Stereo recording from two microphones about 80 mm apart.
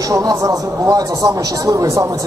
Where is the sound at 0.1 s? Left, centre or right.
Right.